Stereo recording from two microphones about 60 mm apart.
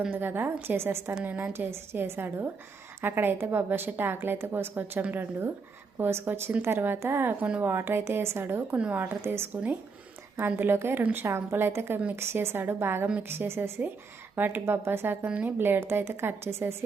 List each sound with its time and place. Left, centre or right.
0.1 s a woman's voice: right
1.2 s a woman's voice: right
1.5 s a woman's voice: right
8.7 s a woman's voice: right
9.0 s a woman's voice: right
10.4 s a woman's voice: right